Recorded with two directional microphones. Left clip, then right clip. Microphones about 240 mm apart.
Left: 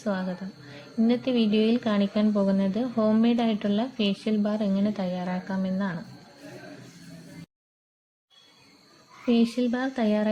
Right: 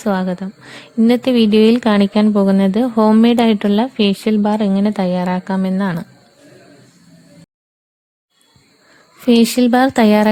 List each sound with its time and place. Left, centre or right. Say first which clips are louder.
0.0 s a woman's voice: right 11 dB; right
9.2 s a woman's voice: right 12 dB; right